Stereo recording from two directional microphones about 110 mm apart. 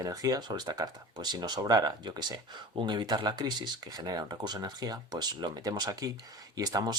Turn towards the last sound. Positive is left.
turn(degrees=-35)  # may be behind; listen again after turning